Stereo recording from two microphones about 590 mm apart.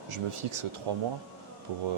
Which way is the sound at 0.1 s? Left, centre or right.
Right.